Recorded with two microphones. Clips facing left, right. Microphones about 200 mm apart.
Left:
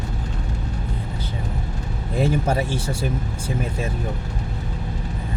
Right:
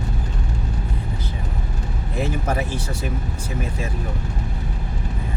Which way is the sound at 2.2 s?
30° left (ahead or behind).